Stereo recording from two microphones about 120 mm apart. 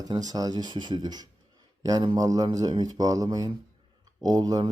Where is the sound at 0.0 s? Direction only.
30° right (ahead or behind).